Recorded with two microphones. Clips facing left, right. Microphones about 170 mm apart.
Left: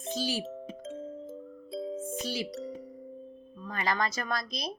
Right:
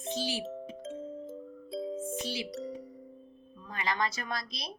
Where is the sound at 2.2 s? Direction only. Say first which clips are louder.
Left 2 dB; 40° left (ahead or behind).